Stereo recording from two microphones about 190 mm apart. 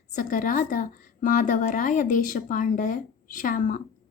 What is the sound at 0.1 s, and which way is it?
Speech, 45° left (ahead or behind).